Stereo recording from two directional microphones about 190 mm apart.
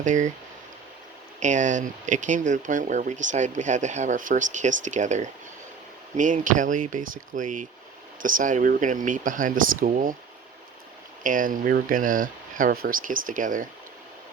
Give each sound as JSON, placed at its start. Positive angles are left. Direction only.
{"t": 0.0, "sound": "speech", "side_deg": -40}
{"t": 1.4, "sound": "speech", "side_deg": -40}
{"t": 11.2, "sound": "speech", "side_deg": -45}